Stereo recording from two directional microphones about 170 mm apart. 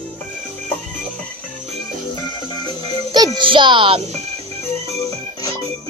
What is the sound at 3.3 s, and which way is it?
Speech, 30° right (ahead or behind).